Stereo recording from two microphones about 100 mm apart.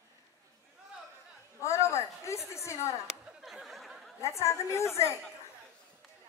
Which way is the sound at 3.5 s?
Centre (ahead or behind).